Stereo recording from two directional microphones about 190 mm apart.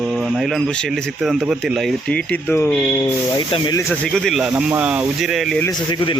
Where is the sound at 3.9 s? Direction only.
5° left (ahead or behind).